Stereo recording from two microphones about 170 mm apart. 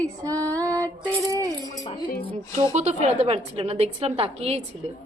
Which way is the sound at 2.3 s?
30° right (ahead or behind).